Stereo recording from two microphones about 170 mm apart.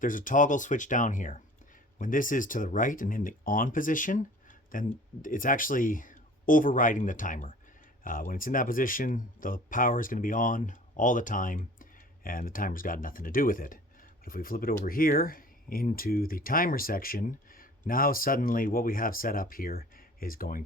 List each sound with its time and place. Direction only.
0.0 s speech: 50° left (ahead or behind)